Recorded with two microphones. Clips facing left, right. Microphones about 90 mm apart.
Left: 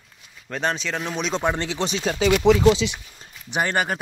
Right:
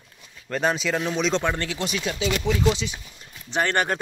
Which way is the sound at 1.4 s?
20° left (ahead or behind).